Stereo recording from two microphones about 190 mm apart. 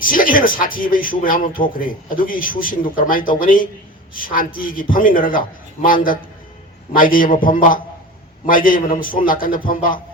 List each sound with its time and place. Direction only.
0.0 s speech: 45° left (ahead or behind)